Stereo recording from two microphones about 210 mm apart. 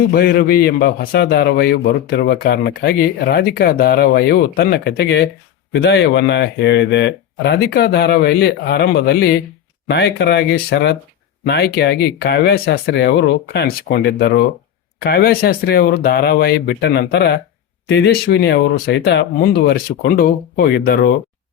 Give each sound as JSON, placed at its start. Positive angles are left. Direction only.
{"t": 0.1, "sound": "a man's voice", "side_deg": 45}